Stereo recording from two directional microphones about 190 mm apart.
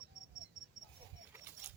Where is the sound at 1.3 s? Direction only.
10° right (ahead or behind).